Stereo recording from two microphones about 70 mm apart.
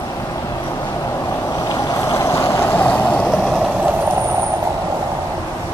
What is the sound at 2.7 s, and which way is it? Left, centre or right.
Vehicle, left.